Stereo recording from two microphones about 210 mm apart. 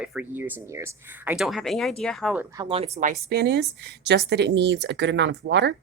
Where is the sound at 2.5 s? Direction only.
25° right (ahead or behind).